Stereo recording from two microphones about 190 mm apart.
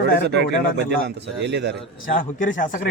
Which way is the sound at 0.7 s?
65° right (ahead or behind).